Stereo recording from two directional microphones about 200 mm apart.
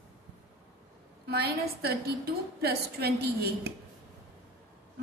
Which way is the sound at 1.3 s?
55° right (ahead or behind).